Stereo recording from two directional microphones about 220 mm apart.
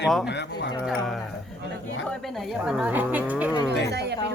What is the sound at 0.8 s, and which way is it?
Speech, centre (ahead or behind).